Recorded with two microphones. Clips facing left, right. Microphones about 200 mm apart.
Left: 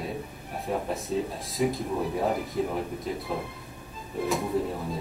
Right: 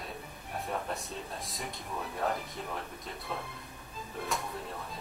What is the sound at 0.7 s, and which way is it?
Speech, centre (ahead or behind).